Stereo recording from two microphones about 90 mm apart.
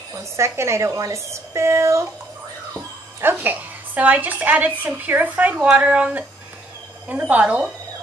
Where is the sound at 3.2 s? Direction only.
20° right (ahead or behind).